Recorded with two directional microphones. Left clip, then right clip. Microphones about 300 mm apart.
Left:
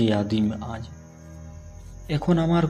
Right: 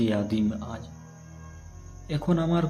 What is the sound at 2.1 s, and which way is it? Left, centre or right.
Speech, centre.